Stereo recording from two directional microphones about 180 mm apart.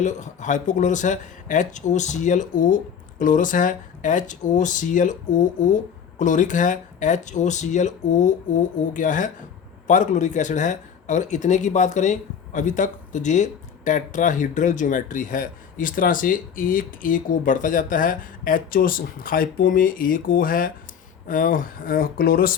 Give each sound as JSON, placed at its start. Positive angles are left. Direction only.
{"t": 0.0, "sound": "speech", "side_deg": 40}